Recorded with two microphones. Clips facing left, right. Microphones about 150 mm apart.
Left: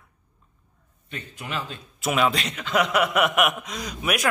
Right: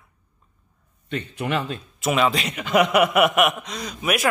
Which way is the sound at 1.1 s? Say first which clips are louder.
Right 8 dB; 70° right (ahead or behind).